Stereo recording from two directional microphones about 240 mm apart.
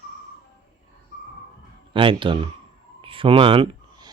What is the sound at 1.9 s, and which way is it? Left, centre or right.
Speech, right.